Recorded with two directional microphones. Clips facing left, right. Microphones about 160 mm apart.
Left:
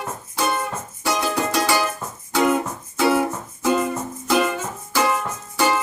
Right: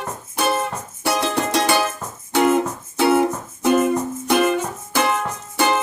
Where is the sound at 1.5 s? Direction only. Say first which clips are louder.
Right 2 dB; 25° right (ahead or behind).